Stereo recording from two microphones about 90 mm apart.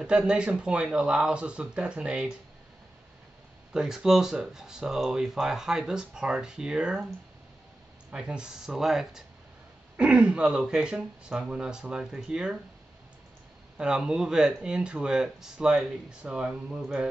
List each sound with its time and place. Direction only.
0.0 s speech: 10° right (ahead or behind)
3.7 s speech: 5° right (ahead or behind)
8.1 s speech: 10° right (ahead or behind)
13.7 s speech: 10° right (ahead or behind)